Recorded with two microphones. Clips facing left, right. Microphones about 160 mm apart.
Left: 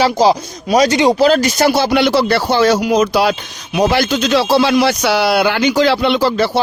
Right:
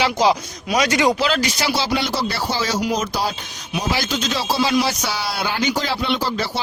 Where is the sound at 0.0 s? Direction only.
35° left (ahead or behind); by 3.3 s 75° left (ahead or behind).